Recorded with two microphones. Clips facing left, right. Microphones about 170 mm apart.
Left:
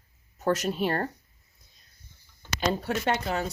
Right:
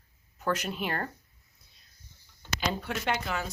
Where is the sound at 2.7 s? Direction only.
35° left (ahead or behind).